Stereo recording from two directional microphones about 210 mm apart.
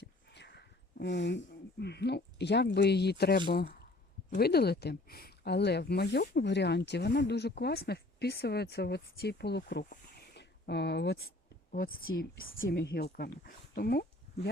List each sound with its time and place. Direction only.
0.0 s a sound: 55° left (ahead or behind)
1.8 s speech: 50° left (ahead or behind)
11.7 s speech: 45° left (ahead or behind)